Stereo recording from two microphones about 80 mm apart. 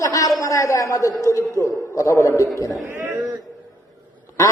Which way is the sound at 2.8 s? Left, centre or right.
Right.